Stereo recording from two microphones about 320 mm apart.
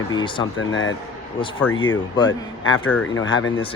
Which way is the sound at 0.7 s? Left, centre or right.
Left.